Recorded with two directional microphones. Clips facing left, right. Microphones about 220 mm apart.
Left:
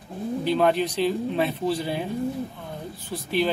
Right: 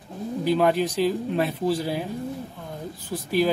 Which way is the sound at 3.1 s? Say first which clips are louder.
Right 2 dB; 5° left (ahead or behind).